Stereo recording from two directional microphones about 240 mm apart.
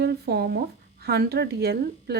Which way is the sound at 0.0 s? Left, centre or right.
Right.